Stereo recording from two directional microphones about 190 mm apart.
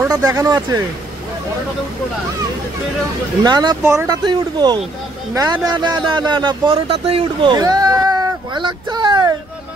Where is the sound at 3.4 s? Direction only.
20° right (ahead or behind).